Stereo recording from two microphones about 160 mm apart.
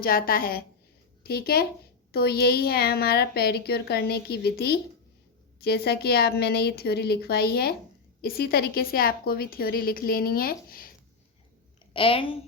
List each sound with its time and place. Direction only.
0.0 s a woman's voice: 65° left (ahead or behind)
1.2 s a woman's voice: 75° left (ahead or behind)
11.9 s a woman's voice: 35° left (ahead or behind)